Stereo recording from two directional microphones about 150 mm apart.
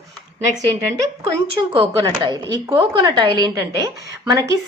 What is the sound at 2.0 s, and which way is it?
A woman's voice, 25° right (ahead or behind).